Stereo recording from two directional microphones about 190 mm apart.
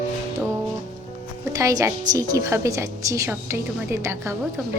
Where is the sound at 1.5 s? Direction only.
20° right (ahead or behind).